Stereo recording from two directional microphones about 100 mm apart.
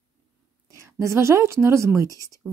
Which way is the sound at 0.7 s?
30° right (ahead or behind).